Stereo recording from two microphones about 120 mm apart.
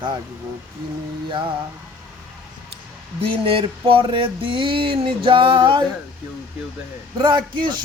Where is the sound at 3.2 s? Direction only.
50° right (ahead or behind).